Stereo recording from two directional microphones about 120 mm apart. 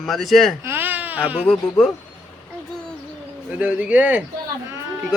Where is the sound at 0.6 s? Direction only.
15° right (ahead or behind).